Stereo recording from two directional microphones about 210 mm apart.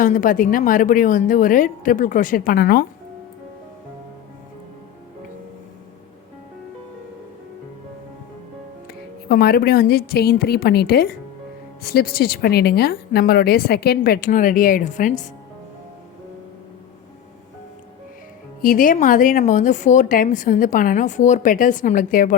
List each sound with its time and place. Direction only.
0.0 s speech: 40° left (ahead or behind)
9.3 s speech: 45° left (ahead or behind)
18.6 s speech: 40° left (ahead or behind)